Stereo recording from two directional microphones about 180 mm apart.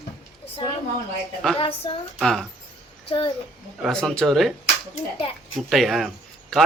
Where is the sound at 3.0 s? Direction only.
30° left (ahead or behind).